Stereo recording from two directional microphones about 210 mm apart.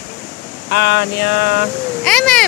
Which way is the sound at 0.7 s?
55° left (ahead or behind).